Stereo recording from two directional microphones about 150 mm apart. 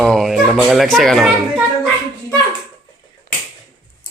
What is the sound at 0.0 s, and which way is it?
Speech, 5° left (ahead or behind).